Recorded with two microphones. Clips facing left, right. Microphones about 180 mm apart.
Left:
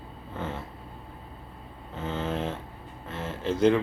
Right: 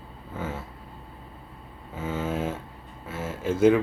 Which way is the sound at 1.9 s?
10° right (ahead or behind).